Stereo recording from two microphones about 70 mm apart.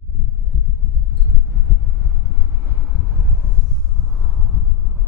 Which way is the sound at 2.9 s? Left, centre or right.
Centre.